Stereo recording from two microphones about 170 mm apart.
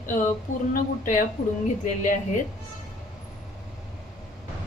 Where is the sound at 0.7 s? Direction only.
50° left (ahead or behind).